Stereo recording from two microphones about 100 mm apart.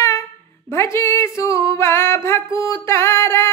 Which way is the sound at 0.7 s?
25° left (ahead or behind).